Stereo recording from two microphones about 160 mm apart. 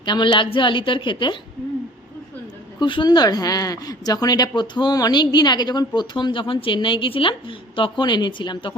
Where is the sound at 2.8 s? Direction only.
30° left (ahead or behind).